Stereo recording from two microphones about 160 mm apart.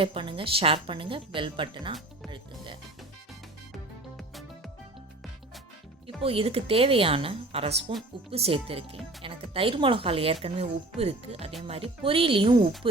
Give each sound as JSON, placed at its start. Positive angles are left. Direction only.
{"t": 0.0, "sound": "speech", "side_deg": -35}
{"t": 4.2, "sound": "music", "side_deg": 0}
{"t": 6.2, "sound": "speech", "side_deg": -35}